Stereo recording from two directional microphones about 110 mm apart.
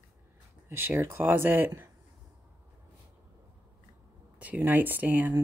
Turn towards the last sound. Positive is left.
turn(degrees=-15)  # may be behind; listen again after turning